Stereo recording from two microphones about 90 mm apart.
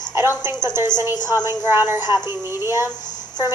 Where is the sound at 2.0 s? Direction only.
50° left (ahead or behind).